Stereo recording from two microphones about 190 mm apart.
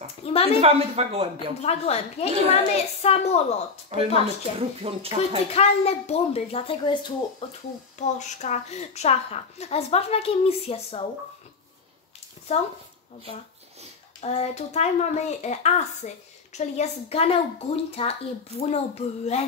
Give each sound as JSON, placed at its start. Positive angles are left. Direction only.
{"t": 0.2, "sound": "a sound", "side_deg": 30}
{"t": 0.6, "sound": "speech", "side_deg": -30}
{"t": 1.6, "sound": "a woman's voice", "side_deg": 35}
{"t": 3.9, "sound": "speech", "side_deg": -30}
{"t": 5.5, "sound": "a woman's voice", "side_deg": 35}
{"t": 8.0, "sound": "a woman's voice", "side_deg": 35}
{"t": 14.2, "sound": "a woman's voice", "side_deg": 35}